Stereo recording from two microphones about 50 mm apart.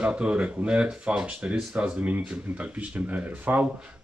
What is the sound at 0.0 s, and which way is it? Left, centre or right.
Speech, right.